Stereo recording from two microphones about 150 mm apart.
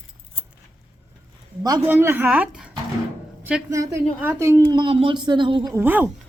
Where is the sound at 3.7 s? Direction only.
20° right (ahead or behind).